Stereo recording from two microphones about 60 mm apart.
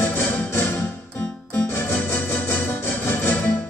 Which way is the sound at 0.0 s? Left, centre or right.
Left.